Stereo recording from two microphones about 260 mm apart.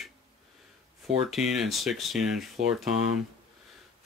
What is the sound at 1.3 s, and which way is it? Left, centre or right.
Speech, centre.